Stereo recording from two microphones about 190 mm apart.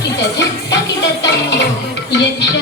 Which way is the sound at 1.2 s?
65° left (ahead or behind).